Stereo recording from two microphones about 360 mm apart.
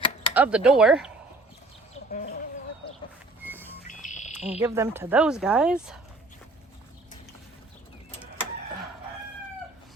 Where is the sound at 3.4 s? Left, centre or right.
Centre.